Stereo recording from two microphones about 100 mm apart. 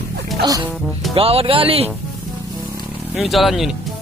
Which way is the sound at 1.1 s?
70° right (ahead or behind).